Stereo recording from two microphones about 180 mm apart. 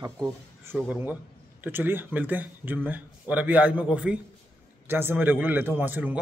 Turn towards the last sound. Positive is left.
turn(degrees=-10)  # may be behind; listen again after turning